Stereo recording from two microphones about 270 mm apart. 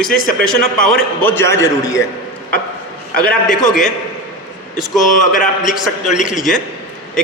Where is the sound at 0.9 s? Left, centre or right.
Centre.